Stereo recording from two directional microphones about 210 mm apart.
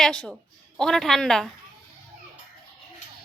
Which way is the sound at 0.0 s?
5° left (ahead or behind).